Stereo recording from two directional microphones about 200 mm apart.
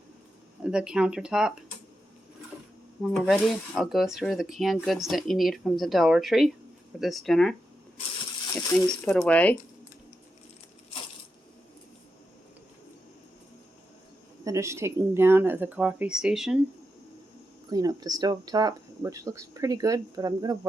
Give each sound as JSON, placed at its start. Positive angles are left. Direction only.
{"t": 0.6, "sound": "speech", "side_deg": -5}
{"t": 3.0, "sound": "speech", "side_deg": 0}
{"t": 8.9, "sound": "speech", "side_deg": 5}
{"t": 14.4, "sound": "speech", "side_deg": -15}
{"t": 17.7, "sound": "speech", "side_deg": -20}